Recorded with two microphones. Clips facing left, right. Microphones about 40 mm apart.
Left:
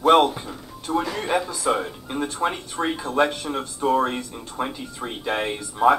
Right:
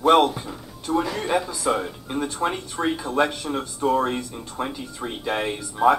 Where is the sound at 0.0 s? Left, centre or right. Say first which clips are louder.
Left 1 dB; centre.